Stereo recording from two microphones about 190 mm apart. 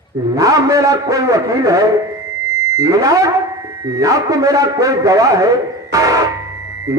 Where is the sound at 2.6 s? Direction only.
15° right (ahead or behind).